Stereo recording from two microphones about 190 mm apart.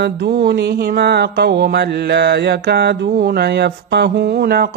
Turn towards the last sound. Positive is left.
turn(degrees=-55)  # may be behind; listen again after turning